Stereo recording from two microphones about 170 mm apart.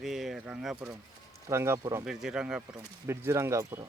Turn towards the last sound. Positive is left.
turn(degrees=-15)  # may be behind; listen again after turning